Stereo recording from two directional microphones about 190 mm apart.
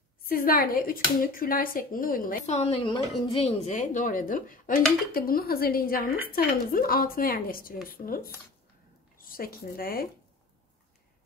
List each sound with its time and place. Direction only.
0.3 s speech: 50° left (ahead or behind)